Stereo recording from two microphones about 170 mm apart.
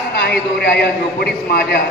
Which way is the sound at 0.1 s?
70° left (ahead or behind).